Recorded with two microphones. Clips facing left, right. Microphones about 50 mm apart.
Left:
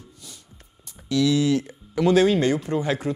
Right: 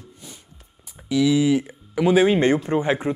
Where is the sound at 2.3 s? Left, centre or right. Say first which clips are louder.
Right 3 dB; right.